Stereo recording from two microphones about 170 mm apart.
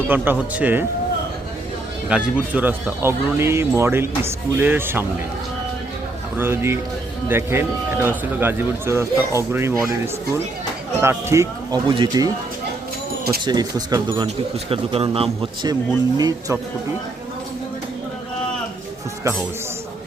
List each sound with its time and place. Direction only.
0.1 s speech: 10° right (ahead or behind)
2.0 s speech: 5° right (ahead or behind)
6.3 s speech: 15° right (ahead or behind)
11.0 s a man's voice: 15° right (ahead or behind)
13.4 s a man's voice: 25° right (ahead or behind)